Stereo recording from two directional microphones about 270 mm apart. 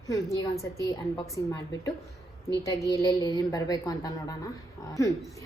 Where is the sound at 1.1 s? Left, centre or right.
Centre.